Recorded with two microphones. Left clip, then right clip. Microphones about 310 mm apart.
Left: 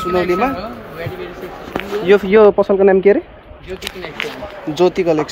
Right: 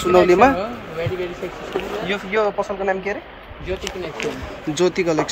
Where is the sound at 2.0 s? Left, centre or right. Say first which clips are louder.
Left 13 dB; centre.